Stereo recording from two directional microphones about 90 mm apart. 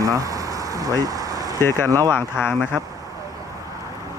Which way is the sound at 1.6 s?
25° left (ahead or behind).